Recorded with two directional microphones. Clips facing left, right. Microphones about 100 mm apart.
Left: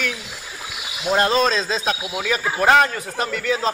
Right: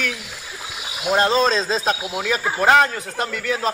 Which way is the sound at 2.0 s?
Centre (ahead or behind).